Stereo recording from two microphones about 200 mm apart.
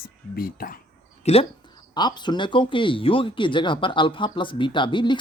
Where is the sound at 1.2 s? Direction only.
30° left (ahead or behind).